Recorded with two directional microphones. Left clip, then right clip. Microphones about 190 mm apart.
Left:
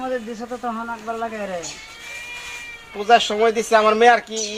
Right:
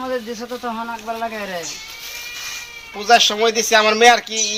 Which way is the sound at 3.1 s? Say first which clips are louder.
Right 2 dB; 25° left (ahead or behind).